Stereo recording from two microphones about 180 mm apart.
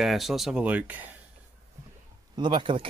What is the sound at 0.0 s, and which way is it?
Speech, centre (ahead or behind).